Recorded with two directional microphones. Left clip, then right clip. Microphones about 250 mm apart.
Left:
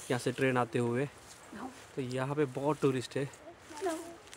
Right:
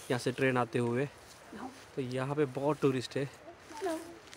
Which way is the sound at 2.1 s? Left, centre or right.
Centre.